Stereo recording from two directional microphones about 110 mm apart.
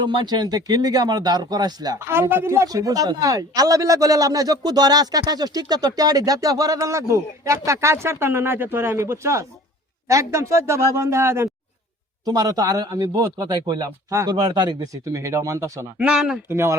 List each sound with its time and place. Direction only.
0.0 s speech: 45° right (ahead or behind)
2.0 s speech: 25° right (ahead or behind)
12.2 s speech: 35° right (ahead or behind)
15.0 s speech: 25° right (ahead or behind)
16.0 s speech: 5° right (ahead or behind)
16.5 s speech: 25° right (ahead or behind)